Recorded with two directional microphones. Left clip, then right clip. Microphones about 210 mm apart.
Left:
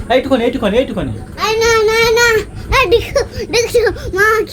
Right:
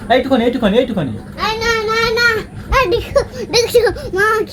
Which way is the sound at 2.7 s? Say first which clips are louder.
Left 2 dB; 35° left (ahead or behind).